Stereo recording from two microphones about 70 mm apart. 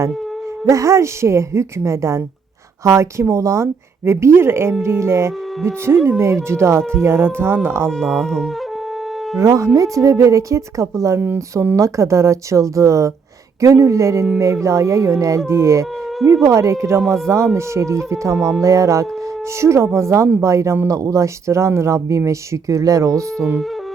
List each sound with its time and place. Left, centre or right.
0.6 s a woman's voice: right
7.9 s speech: centre
9.4 s speech: right
17.0 s speech: centre
17.2 s speech: right